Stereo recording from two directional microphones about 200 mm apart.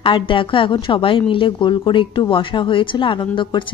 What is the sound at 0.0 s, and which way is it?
A woman's voice, 25° left (ahead or behind).